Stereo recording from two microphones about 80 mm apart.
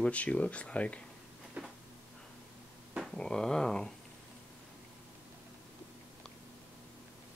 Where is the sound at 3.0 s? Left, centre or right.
Centre.